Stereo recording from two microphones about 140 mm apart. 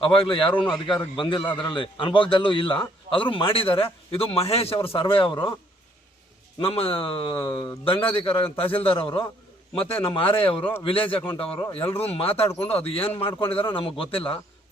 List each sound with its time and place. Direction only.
0.0 s a man's voice: 40° left (ahead or behind)
0.5 s speech: 5° left (ahead or behind)
0.9 s a man's voice: 35° left (ahead or behind)
6.6 s a man's voice: 40° left (ahead or behind)